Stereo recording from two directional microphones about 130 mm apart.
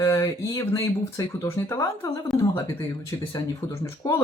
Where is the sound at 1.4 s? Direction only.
20° left (ahead or behind).